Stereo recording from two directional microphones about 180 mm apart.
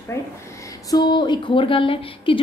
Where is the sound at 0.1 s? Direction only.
15° left (ahead or behind).